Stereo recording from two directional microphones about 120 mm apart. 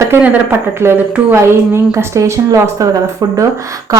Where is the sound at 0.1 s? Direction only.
10° right (ahead or behind); by 3.4 s 30° right (ahead or behind).